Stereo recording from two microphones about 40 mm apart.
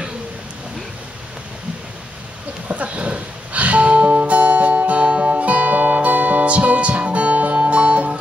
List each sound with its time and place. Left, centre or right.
2.7 s music: right